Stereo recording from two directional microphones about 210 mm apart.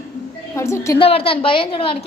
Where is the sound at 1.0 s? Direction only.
25° left (ahead or behind).